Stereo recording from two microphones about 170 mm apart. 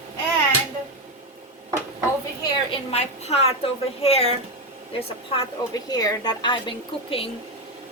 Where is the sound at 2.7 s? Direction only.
40° left (ahead or behind).